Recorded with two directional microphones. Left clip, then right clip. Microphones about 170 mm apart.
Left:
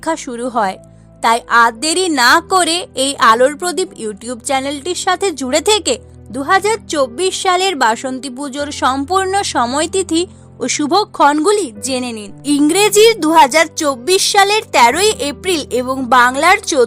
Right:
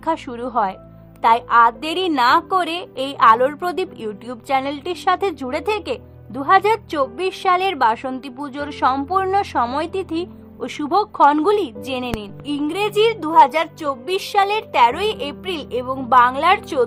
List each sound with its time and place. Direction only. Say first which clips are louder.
0.0 s a woman's voice: left 3 dB; 40° left (ahead or behind)
12.5 s a woman's voice: left 10 dB; 60° left (ahead or behind)